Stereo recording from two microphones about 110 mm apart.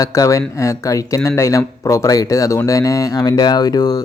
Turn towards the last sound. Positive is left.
turn(degrees=35)  # may be behind; listen again after turning